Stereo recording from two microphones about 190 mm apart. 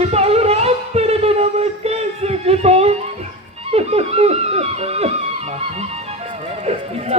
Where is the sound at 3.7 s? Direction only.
35° right (ahead or behind).